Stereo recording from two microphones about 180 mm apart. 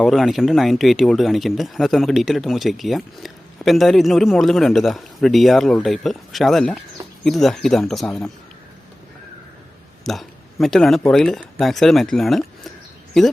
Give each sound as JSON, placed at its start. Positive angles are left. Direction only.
{"t": 0.0, "sound": "speech", "side_deg": 0}
{"t": 10.0, "sound": "speech", "side_deg": 0}